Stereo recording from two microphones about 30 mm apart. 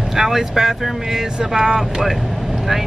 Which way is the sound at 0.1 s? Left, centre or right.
Centre.